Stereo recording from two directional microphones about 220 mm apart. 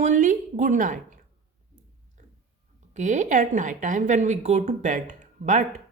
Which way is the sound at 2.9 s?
35° right (ahead or behind).